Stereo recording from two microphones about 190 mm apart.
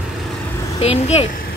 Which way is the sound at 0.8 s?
35° left (ahead or behind).